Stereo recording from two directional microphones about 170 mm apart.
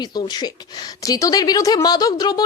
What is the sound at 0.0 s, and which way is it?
A woman's voice, 25° left (ahead or behind).